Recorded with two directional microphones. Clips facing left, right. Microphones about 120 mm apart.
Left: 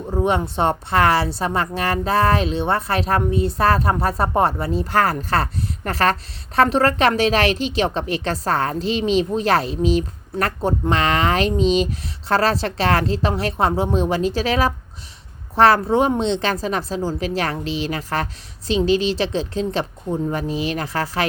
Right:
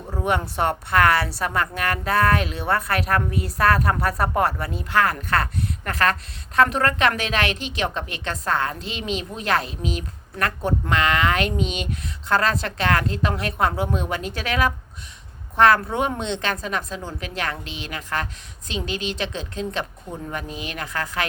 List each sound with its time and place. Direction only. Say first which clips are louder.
0.1 s a woman's voice: left 4 dB; 25° left (ahead or behind)